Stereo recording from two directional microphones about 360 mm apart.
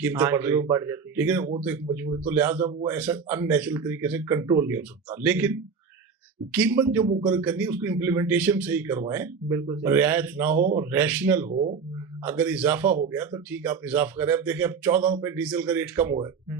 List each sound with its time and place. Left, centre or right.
0.0 s a man's voice: centre
11.5 s speech: centre
12.2 s a man's voice: centre